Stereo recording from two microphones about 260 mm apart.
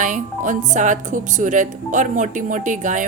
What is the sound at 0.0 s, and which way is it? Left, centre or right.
Speech, right.